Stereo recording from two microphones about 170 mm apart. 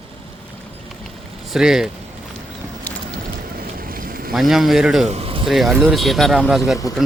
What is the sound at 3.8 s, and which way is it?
Boat, 60° right (ahead or behind).